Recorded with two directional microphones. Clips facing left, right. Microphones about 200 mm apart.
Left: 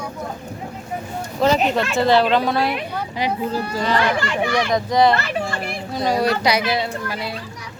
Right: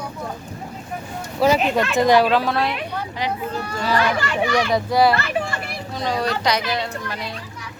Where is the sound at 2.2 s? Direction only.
Centre (ahead or behind).